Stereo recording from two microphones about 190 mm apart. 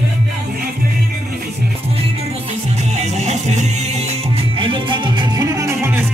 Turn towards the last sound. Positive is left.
turn(degrees=-15)  # may be behind; listen again after turning